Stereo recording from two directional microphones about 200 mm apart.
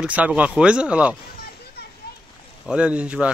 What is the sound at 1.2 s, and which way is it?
Children playing, 50° left (ahead or behind).